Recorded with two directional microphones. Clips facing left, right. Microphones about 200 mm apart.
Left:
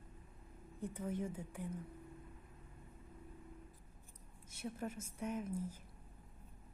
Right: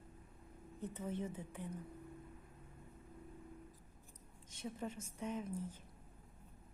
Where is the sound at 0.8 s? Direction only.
10° left (ahead or behind).